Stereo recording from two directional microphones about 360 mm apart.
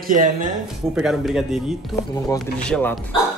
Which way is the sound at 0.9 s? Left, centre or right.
Centre.